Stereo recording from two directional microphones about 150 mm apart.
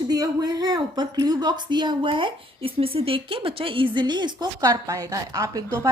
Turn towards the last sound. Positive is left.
turn(degrees=-20)  # may be behind; listen again after turning